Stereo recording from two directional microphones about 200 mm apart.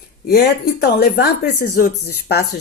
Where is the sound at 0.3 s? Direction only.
50° left (ahead or behind).